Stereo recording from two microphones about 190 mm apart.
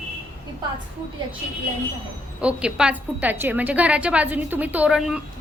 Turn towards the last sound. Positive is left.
turn(degrees=-5)  # may be behind; listen again after turning